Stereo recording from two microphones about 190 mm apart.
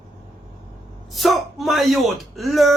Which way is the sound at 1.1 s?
Centre (ahead or behind).